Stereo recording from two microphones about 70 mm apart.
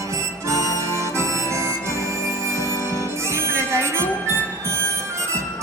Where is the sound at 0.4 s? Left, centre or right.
Right.